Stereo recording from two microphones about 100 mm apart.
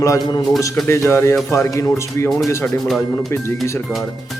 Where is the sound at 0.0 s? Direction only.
35° left (ahead or behind).